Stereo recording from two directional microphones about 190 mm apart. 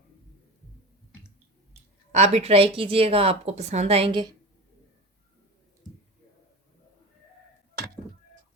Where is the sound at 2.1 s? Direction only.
35° right (ahead or behind).